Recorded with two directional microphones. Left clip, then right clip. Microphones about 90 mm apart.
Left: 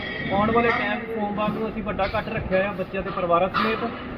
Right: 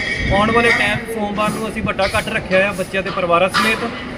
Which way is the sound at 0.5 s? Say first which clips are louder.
Right 8 dB; 20° right (ahead or behind).